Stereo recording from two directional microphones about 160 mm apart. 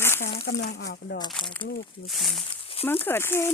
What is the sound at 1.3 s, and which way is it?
Speech, 5° left (ahead or behind).